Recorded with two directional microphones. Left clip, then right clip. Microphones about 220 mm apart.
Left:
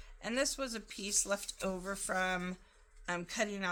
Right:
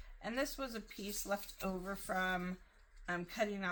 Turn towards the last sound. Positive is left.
turn(degrees=45)  # may be behind; listen again after turning